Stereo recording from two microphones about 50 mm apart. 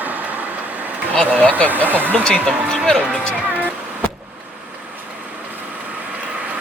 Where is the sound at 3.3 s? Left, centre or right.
Right.